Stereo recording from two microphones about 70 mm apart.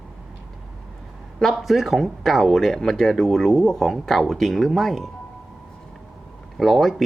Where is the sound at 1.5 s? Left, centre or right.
Centre.